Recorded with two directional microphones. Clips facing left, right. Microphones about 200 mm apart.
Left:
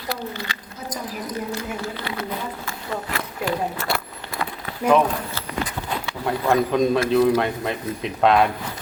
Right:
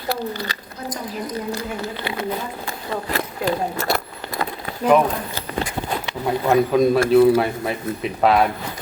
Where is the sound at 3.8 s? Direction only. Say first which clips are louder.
Right 4 dB; 40° right (ahead or behind).